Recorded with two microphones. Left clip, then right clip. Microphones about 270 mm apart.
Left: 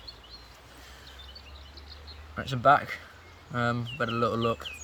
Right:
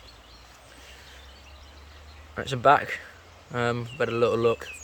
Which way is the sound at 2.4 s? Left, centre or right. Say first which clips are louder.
Right 2 dB; centre.